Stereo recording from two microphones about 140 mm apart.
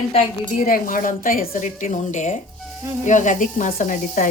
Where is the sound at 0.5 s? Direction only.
80° left.